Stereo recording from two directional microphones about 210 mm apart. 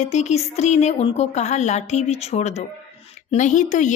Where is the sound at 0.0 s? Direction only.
30° left (ahead or behind).